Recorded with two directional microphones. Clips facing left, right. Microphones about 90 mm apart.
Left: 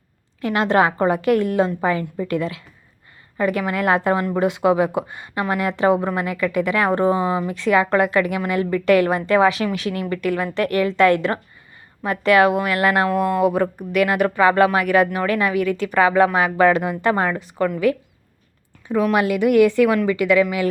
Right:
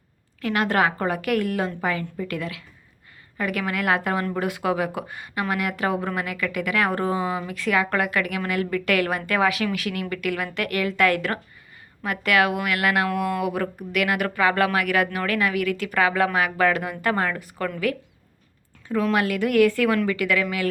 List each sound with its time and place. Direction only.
0.4 s speech: 25° left (ahead or behind)